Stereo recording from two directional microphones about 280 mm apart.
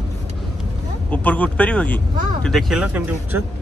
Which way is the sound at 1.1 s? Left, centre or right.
Centre.